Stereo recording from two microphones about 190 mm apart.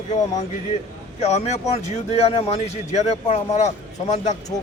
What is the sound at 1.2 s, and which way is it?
Speech, 35° left (ahead or behind).